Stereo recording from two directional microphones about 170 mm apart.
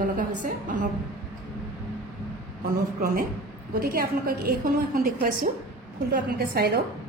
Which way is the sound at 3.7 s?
60° right (ahead or behind).